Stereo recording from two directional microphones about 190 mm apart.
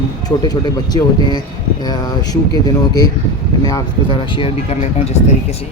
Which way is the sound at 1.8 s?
20° left (ahead or behind).